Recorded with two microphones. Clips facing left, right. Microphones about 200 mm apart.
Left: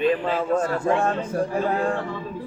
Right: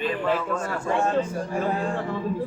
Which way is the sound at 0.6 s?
55° left (ahead or behind).